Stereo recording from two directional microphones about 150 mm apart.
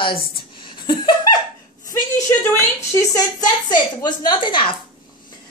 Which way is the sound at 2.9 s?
25° left (ahead or behind).